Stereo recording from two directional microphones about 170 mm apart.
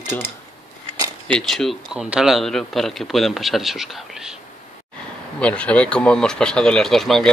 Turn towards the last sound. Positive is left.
turn(degrees=0)  # may be behind; listen again after turning